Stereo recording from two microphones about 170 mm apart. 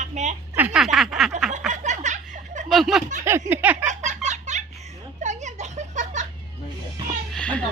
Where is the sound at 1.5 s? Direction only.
45° right (ahead or behind).